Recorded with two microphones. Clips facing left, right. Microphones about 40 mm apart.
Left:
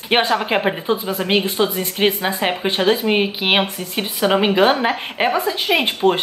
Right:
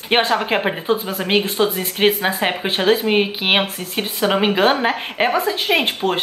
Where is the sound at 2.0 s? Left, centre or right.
Centre.